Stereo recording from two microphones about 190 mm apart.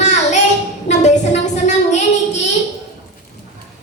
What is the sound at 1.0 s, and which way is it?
Child singing, 40° left (ahead or behind).